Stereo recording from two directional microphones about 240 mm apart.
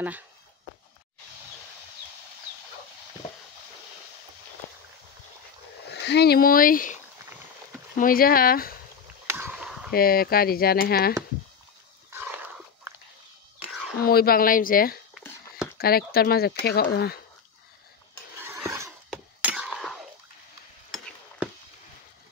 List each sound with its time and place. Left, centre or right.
5.9 s speech: left
9.3 s a sound: centre
9.9 s speech: left
12.1 s dog: centre
13.9 s speech: left
18.4 s a sound: centre